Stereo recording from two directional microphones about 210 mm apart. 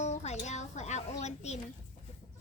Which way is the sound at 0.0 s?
30° left (ahead or behind).